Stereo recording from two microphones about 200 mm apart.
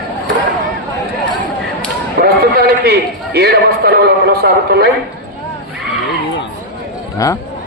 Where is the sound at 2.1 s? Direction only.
50° right (ahead or behind).